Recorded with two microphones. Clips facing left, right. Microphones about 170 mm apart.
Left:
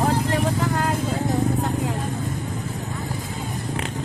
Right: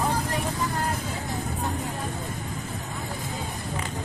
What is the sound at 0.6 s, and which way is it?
Vehicle, 70° left (ahead or behind).